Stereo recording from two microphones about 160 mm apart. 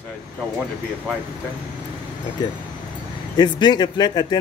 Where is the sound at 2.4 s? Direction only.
25° left (ahead or behind).